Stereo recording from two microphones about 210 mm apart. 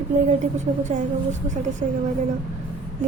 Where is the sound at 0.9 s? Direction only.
35° right (ahead or behind).